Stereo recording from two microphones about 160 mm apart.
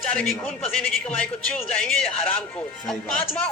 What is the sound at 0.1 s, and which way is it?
Speech, 5° left (ahead or behind).